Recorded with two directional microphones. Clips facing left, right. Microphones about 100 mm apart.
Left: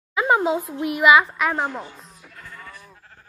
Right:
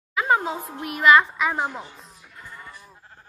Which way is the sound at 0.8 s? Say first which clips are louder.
Left 1 dB; 20° left (ahead or behind).